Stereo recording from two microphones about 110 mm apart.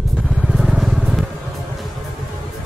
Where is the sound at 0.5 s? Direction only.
5° right (ahead or behind).